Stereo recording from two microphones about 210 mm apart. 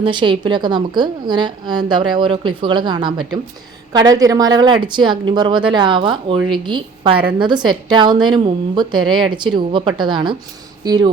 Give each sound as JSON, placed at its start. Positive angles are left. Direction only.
{"t": 0.0, "sound": "a woman's voice", "side_deg": -20}